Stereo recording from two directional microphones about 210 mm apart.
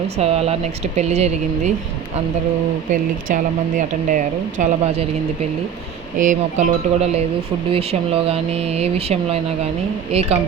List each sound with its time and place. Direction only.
0.2 s speech: 30° right (ahead or behind)
2.9 s speech: 35° right (ahead or behind)
6.1 s speech: 40° right (ahead or behind)